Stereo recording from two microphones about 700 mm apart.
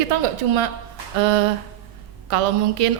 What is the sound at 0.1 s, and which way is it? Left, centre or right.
Speech, right.